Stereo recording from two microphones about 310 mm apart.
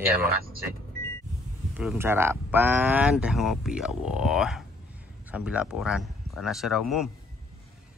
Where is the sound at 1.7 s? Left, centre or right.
Centre.